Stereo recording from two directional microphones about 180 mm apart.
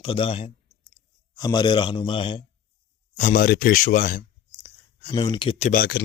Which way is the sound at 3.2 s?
45° left (ahead or behind).